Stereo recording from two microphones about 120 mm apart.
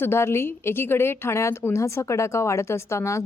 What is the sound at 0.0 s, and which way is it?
A woman's voice, 20° left (ahead or behind).